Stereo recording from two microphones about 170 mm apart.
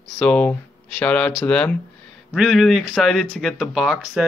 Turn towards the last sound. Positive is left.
turn(degrees=-5)  # may be behind; listen again after turning